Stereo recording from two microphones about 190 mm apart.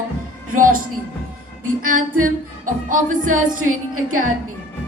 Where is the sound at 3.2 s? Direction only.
90° right.